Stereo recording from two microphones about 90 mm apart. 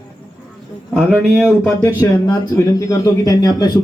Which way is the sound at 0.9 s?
5° right (ahead or behind).